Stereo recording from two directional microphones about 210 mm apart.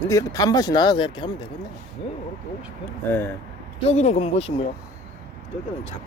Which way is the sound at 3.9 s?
30° left (ahead or behind).